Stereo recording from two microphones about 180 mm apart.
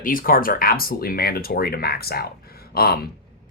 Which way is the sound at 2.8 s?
60° left (ahead or behind).